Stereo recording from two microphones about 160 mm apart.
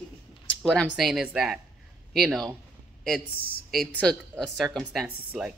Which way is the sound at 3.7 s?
5° left (ahead or behind).